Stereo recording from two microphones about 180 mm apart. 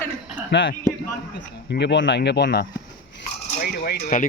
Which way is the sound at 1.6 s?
75° left (ahead or behind).